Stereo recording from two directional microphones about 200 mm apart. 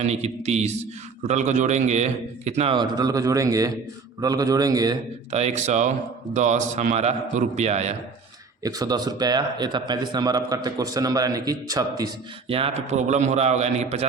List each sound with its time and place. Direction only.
0.0 s a man's voice: 35° right (ahead or behind); by 4.9 s 20° right (ahead or behind)
5.3 s a man's voice: 35° right (ahead or behind)
8.6 s a man's voice: 20° right (ahead or behind)